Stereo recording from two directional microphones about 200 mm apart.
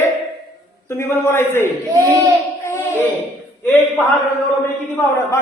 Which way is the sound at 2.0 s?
15° right (ahead or behind).